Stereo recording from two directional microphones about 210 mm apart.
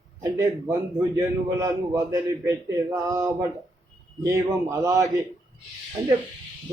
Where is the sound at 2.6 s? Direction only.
15° right (ahead or behind).